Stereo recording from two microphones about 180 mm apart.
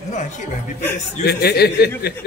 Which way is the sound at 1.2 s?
65° left (ahead or behind).